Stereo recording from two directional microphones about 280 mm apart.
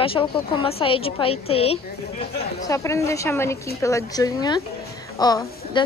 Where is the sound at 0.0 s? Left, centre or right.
Centre.